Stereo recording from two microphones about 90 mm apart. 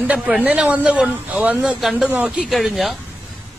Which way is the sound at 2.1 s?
15° right (ahead or behind).